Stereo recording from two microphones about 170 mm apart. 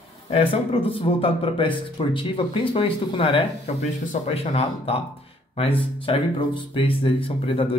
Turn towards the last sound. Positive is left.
turn(degrees=30)  # may be behind; listen again after turning